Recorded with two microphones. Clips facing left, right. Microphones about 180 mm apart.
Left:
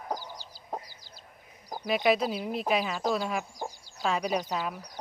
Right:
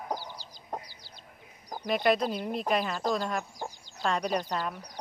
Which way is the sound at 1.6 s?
5° left (ahead or behind).